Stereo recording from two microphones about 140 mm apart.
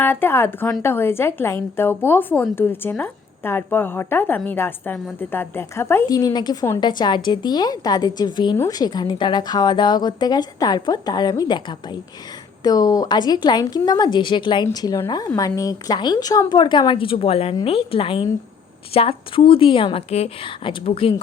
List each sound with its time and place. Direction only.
0.0 s a woman's voice: 15° left (ahead or behind)
6.1 s a woman's voice: 30° left (ahead or behind)
12.6 s a woman's voice: 25° left (ahead or behind)